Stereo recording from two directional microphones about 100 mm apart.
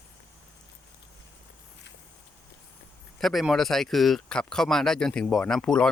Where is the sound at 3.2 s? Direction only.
Centre (ahead or behind).